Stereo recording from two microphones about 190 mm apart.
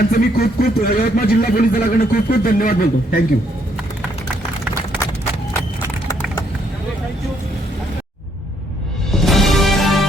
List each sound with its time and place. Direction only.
0.1 s speech: 50° left (ahead or behind)
9.1 s music: centre (ahead or behind)